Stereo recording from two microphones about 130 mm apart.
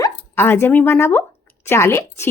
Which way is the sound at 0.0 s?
15° left (ahead or behind).